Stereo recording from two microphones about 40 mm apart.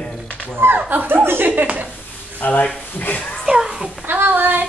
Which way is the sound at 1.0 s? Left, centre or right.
Right.